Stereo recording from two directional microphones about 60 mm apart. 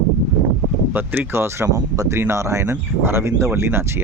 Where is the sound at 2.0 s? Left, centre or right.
Right.